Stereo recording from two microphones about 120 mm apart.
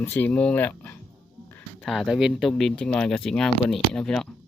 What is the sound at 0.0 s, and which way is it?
Speech, 15° left (ahead or behind).